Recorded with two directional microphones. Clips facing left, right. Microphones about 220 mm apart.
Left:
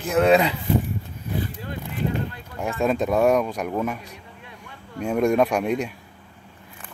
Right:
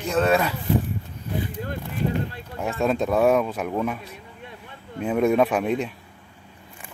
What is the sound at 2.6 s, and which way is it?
Speech, centre (ahead or behind).